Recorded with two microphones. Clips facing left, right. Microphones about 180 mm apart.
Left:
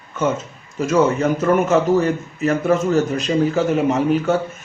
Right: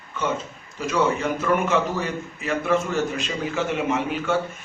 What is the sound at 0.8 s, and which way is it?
A man's voice, 45° left (ahead or behind).